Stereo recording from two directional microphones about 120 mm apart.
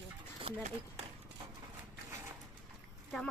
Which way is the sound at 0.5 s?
55° right (ahead or behind).